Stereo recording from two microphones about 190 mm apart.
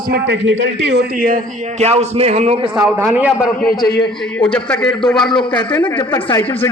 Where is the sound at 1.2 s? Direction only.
45° right (ahead or behind).